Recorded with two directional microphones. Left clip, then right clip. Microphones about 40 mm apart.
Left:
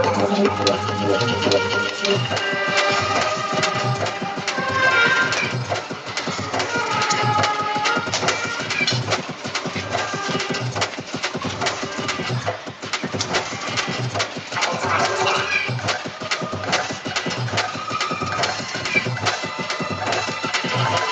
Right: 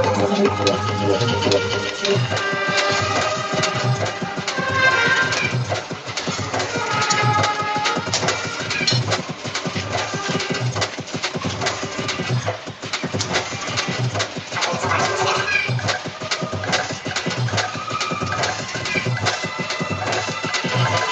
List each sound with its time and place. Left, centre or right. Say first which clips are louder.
0.0 s music: even; left
6.5 s music: left 1 dB; left
10.3 s music: even; left
14.1 s a sound: even; left
15.9 s music: even; left
20.1 s music: left 1 dB; left